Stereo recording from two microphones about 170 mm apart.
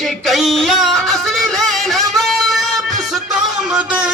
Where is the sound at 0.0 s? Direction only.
Centre (ahead or behind).